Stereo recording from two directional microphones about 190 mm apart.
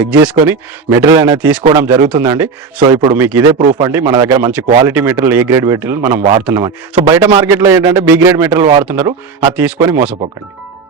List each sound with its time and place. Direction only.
0.0 s a man's voice: 5° right (ahead or behind)